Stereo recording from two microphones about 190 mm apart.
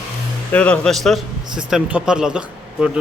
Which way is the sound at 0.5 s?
5° left (ahead or behind).